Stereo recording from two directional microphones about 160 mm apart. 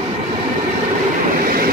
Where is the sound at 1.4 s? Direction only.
65° right (ahead or behind).